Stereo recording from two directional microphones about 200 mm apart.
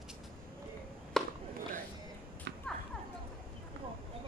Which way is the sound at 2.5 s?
55° right (ahead or behind).